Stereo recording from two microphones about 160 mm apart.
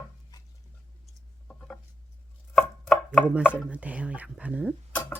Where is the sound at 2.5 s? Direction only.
Centre (ahead or behind).